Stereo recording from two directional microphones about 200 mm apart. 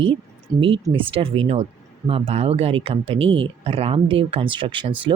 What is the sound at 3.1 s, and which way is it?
Speech, 70° right (ahead or behind).